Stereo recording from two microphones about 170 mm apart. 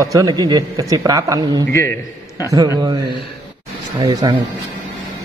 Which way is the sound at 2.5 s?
20° right (ahead or behind).